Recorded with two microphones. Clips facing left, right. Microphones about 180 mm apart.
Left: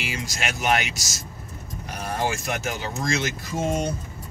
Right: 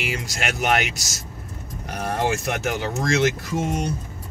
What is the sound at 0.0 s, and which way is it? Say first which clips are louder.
Speech: right 3 dB; 60° right (ahead or behind).